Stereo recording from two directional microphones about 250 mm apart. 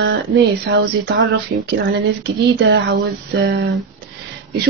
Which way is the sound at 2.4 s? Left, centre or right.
Right.